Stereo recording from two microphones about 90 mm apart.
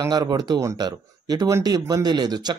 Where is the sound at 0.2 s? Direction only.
45° right (ahead or behind).